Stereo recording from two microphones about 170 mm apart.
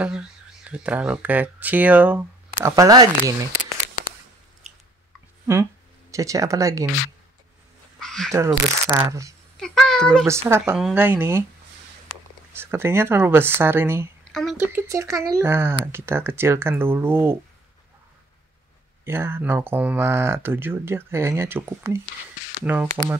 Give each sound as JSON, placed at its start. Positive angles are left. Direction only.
{"t": 0.0, "sound": "speech", "side_deg": -5}
{"t": 2.7, "sound": "speech", "side_deg": -20}
{"t": 6.1, "sound": "speech", "side_deg": -20}
{"t": 8.0, "sound": "a sound", "side_deg": 5}
{"t": 8.3, "sound": "speech", "side_deg": -15}
{"t": 9.6, "sound": "a sound", "side_deg": 5}
{"t": 10.5, "sound": "speech", "side_deg": -15}
{"t": 12.5, "sound": "speech", "side_deg": -15}
{"t": 14.3, "sound": "a woman's voice", "side_deg": 0}
{"t": 14.7, "sound": "speech", "side_deg": -15}
{"t": 19.0, "sound": "speech", "side_deg": -15}